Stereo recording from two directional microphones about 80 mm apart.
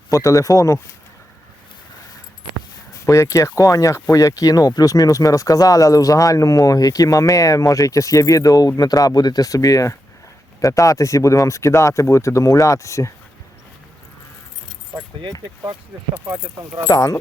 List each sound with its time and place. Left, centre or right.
0.1 s speech: left
3.1 s speech: left
15.2 s speech: right
16.1 s speech: right
16.9 s speech: left